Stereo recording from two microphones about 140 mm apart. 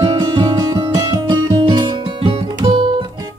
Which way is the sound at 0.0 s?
25° right (ahead or behind).